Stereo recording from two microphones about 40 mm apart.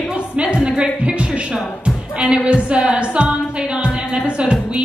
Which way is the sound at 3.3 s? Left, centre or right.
Right.